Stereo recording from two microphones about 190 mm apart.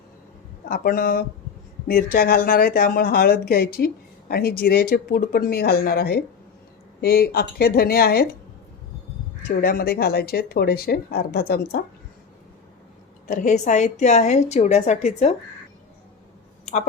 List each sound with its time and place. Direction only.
0.7 s speech: 50° left (ahead or behind)
9.6 s a woman's voice: 50° left (ahead or behind)
13.2 s a woman's voice: 45° left (ahead or behind)